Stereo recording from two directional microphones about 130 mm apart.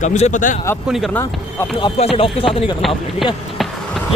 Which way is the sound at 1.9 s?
50° left (ahead or behind).